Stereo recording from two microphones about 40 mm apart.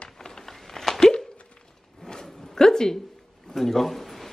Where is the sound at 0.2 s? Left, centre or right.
Centre.